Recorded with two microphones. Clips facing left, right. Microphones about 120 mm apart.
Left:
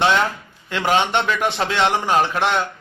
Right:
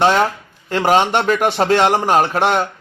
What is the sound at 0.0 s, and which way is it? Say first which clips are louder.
A man's voice: right 4 dB; 40° right (ahead or behind).